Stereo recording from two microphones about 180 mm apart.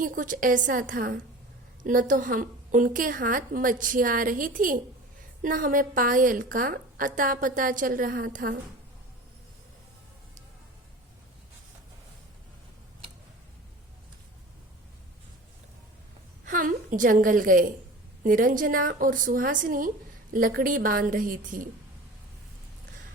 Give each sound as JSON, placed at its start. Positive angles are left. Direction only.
{"t": 0.0, "sound": "a woman's voice", "side_deg": -50}
{"t": 16.5, "sound": "a woman's voice", "side_deg": -45}